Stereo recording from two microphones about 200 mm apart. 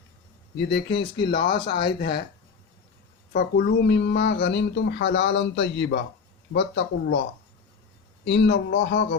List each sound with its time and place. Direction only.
0.5 s speech: 60° left (ahead or behind)
3.3 s speech: 55° left (ahead or behind)